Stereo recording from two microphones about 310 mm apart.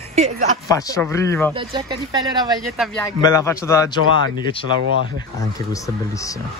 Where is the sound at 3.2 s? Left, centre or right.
Centre.